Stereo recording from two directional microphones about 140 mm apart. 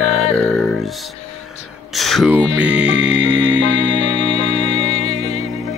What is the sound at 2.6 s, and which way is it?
Music, 10° right (ahead or behind).